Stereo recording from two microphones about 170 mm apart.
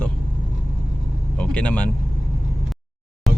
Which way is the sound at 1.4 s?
10° left (ahead or behind).